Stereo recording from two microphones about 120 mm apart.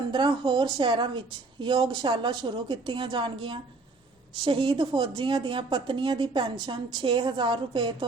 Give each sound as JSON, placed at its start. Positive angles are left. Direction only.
{"t": 0.1, "sound": "a woman's voice", "side_deg": -40}